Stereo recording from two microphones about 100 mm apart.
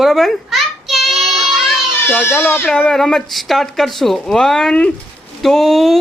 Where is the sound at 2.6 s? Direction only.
5° left (ahead or behind).